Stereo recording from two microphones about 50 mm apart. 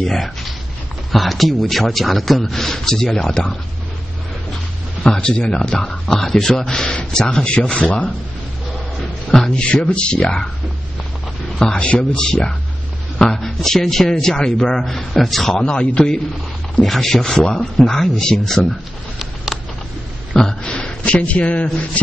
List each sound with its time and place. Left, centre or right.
0.0 s speech: centre
5.1 s a man's voice: centre
9.3 s speech: centre
11.6 s a man's voice: centre
15.6 s a man's voice: centre
16.8 s a man's voice: centre
19.1 s a sound: centre
20.3 s a sound: centre
22.0 s speech: left